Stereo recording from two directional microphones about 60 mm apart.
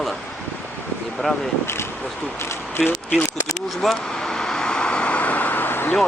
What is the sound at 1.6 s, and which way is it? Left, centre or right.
Speech, left.